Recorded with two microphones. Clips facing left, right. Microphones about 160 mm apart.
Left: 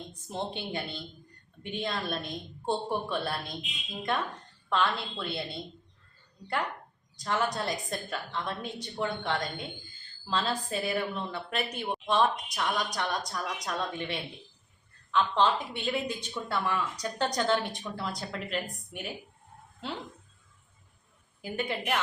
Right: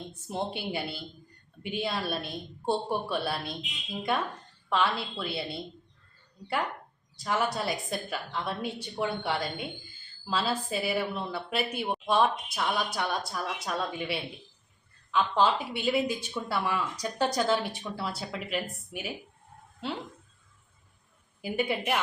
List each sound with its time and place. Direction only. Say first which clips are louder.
0.1 s a woman's voice: right 2 dB; 10° right (ahead or behind)
21.4 s speech: right 3 dB; 10° right (ahead or behind)